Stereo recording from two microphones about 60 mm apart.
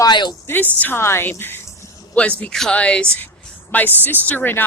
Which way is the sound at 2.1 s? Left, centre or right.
Left.